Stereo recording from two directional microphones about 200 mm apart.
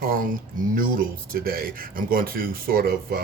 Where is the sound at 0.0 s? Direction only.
45° right (ahead or behind).